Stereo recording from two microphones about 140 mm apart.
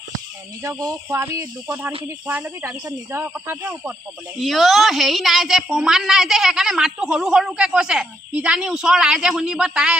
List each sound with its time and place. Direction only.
0.6 s speech: 25° right (ahead or behind)
1.7 s speech: 10° right (ahead or behind)
4.4 s a woman's voice: centre (ahead or behind)